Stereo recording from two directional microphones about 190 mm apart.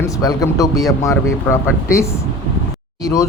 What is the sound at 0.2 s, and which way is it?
Speech, 20° left (ahead or behind).